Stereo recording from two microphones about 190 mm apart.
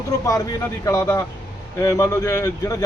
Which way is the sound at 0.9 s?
15° left (ahead or behind).